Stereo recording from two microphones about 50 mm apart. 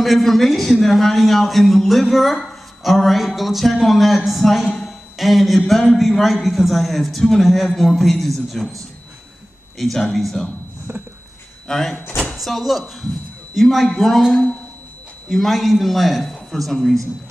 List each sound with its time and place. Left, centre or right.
0.0 s a man's voice: centre
4.7 s a sound: centre
5.9 s a man's voice: centre
10.9 s a sound: right
11.6 s a man's voice: centre
14.3 s a woman's voice: left
15.2 s a man's voice: centre